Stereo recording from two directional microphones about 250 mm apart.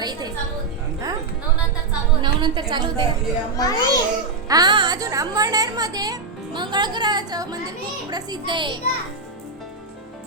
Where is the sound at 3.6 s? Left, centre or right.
Centre.